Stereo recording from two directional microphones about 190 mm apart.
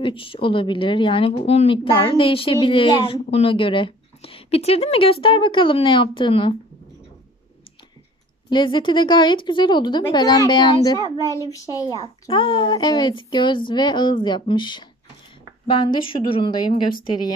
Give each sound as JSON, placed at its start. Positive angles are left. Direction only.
{"t": 0.0, "sound": "speech", "side_deg": 30}
{"t": 8.5, "sound": "a child's voice", "side_deg": 25}